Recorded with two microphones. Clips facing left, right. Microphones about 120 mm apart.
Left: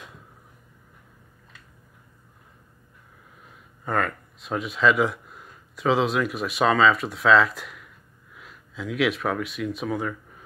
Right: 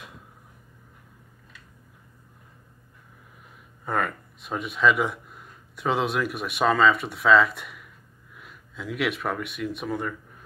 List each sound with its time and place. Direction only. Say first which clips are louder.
3.8 s speech: left 1 dB; 5° right (ahead or behind)